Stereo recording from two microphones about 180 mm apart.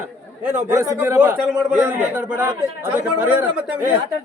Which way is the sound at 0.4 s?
10° right (ahead or behind).